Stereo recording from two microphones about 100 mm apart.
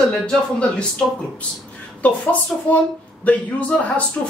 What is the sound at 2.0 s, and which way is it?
A woman's voice, 15° left (ahead or behind).